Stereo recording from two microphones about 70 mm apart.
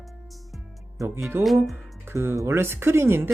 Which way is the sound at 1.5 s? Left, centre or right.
Centre.